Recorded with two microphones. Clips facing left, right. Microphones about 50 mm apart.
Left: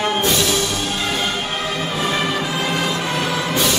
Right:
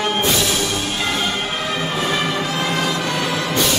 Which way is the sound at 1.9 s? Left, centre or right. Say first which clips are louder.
Left 1 dB; centre.